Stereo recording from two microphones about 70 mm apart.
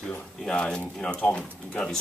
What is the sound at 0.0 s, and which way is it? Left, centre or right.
Speech, centre.